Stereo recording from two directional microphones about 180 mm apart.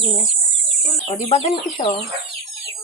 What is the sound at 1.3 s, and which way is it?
Speech, 30° left (ahead or behind).